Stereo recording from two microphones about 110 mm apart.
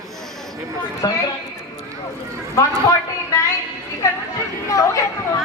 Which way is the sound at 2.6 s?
30° left (ahead or behind).